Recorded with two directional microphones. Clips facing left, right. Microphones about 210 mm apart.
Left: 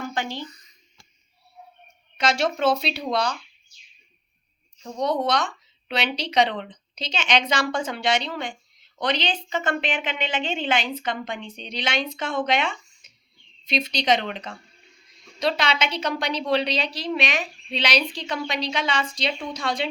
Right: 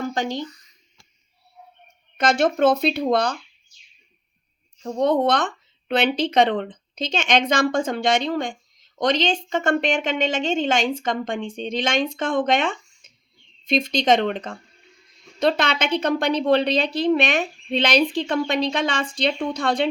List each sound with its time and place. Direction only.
0.1 s speech: 45° right (ahead or behind)
0.4 s a sound: 20° left (ahead or behind)
2.1 s a woman's voice: 55° right (ahead or behind)
4.8 s a woman's voice: 50° right (ahead or behind)